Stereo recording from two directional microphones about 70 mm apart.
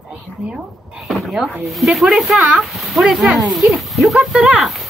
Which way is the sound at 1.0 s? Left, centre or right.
Centre.